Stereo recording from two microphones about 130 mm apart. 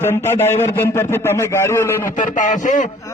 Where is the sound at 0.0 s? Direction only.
20° left (ahead or behind).